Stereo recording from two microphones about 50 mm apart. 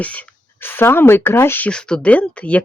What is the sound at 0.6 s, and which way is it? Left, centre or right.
Speech, left.